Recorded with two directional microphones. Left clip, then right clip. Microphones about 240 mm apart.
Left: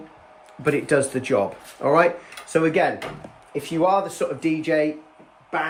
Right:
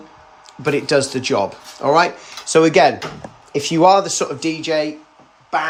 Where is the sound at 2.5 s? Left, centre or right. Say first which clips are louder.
Right 8 dB; centre.